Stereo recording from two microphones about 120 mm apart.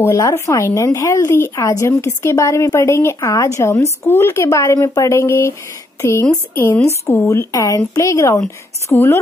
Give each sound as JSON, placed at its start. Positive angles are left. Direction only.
{"t": 0.0, "sound": "speech", "side_deg": 25}